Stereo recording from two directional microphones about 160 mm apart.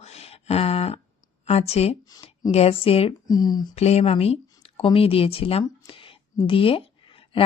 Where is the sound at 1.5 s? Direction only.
40° left (ahead or behind).